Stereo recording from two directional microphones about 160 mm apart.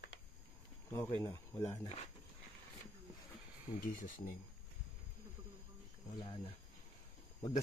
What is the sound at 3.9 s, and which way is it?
Speech, 60° left (ahead or behind).